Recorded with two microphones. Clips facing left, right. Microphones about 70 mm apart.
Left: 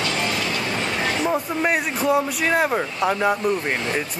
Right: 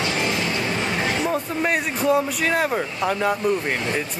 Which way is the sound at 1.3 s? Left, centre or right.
Centre.